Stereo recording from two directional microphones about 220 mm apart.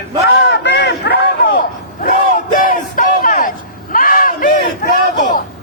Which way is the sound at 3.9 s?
40° left (ahead or behind).